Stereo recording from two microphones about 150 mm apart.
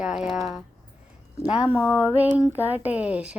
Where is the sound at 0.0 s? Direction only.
5° right (ahead or behind).